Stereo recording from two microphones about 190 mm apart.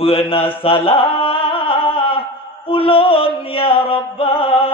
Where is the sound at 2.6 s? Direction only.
30° left (ahead or behind).